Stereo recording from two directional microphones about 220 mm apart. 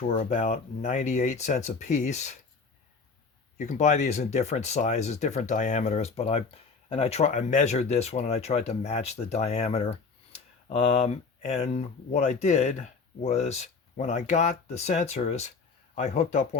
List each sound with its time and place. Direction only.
0.1 s speech: 35° left (ahead or behind)
3.6 s speech: 35° left (ahead or behind)